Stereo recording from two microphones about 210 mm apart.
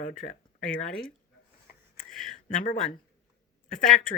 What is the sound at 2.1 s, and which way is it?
Speech, centre (ahead or behind).